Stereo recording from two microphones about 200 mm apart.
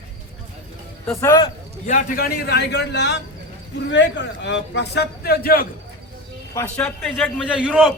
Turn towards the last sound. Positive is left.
turn(degrees=5)  # may be behind; listen again after turning